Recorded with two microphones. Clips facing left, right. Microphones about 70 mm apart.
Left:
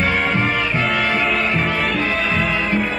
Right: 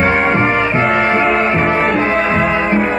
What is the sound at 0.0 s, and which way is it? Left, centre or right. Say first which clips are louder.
Music: right 6 dB; right.